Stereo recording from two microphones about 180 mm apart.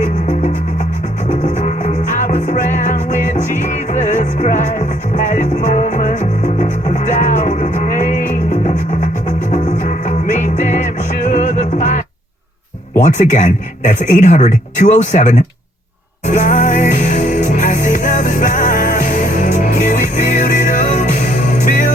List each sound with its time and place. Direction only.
0.0 s music: 40° left (ahead or behind)
9.5 s music: 40° left (ahead or behind)
13.1 s speech: 45° left (ahead or behind)
16.3 s music: 45° left (ahead or behind)